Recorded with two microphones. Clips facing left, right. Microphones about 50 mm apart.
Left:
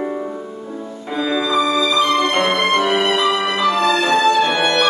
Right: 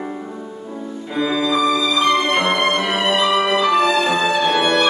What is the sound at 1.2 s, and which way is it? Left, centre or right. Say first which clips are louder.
Music: even; centre.